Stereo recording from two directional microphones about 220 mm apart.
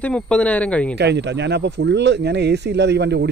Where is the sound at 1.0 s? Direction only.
50° right (ahead or behind).